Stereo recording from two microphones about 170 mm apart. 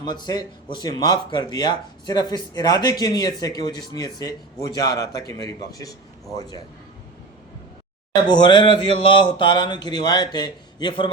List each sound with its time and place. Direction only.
0.0 s speech: 25° left (ahead or behind)
8.1 s speech: 25° left (ahead or behind)